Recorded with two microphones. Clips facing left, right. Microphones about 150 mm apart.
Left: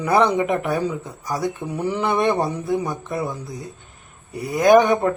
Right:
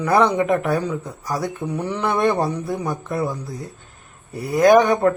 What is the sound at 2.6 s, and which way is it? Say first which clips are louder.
Speech: left 2 dB; centre (ahead or behind).